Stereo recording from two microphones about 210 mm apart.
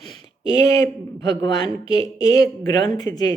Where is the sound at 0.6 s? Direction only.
15° left (ahead or behind).